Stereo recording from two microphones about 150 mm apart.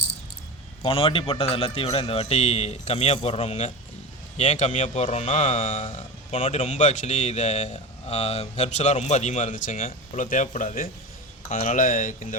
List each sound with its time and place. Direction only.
0.9 s a man's voice: 35° left (ahead or behind); by 9.7 s 60° left (ahead or behind)
9.7 s speech: 45° left (ahead or behind)
10.2 s speech: 55° left (ahead or behind)